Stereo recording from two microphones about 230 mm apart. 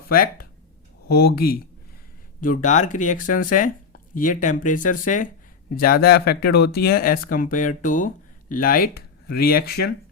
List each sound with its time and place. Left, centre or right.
0.1 s speech: left